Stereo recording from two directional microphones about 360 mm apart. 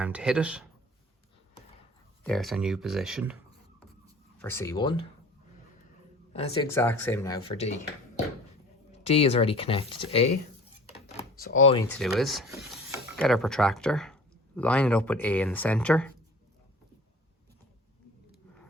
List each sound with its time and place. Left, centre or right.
0.0 s speech: centre
2.2 s speech: centre
4.4 s speech: centre
6.3 s speech: centre
9.0 s speech: centre
11.3 s a sound: left; by 16.1 s centre